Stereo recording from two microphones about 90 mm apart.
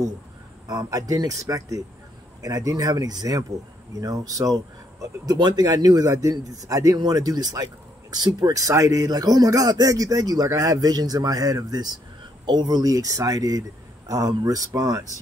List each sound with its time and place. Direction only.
0.7 s a man's voice: 45° right (ahead or behind)